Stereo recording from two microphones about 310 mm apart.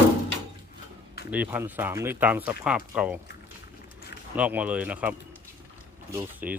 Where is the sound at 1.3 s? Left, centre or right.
Centre.